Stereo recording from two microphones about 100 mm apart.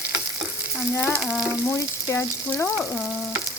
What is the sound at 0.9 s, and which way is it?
Stir, 20° left (ahead or behind).